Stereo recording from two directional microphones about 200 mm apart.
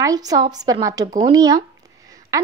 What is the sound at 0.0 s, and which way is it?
A woman's voice, 20° right (ahead or behind).